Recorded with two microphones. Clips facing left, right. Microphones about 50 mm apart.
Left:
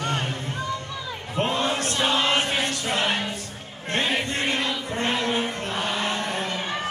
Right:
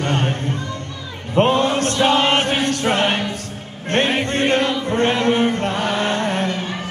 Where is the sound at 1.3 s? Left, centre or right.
Right.